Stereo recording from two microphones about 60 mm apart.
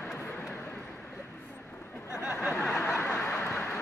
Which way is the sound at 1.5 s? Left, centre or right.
Left.